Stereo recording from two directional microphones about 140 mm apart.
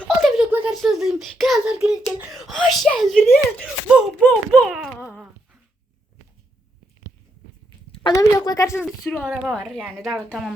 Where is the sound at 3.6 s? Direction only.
10° right (ahead or behind).